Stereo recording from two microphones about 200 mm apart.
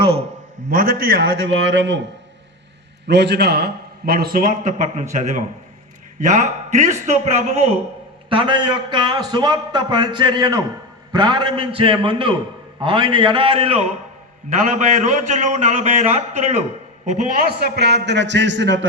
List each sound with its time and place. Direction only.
0.0 s a man's voice: 30° right (ahead or behind)
0.7 s a man's voice: 45° right (ahead or behind)
1.5 s a man's voice: 65° right (ahead or behind)
3.1 s a man's voice: 55° right (ahead or behind); by 16.6 s 35° right (ahead or behind)
17.5 s a man's voice: 55° right (ahead or behind)